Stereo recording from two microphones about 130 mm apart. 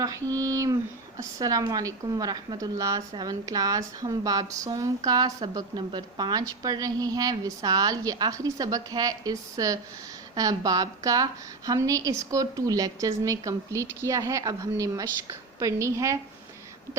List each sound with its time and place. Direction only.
0.0 s a woman's voice: 25° right (ahead or behind)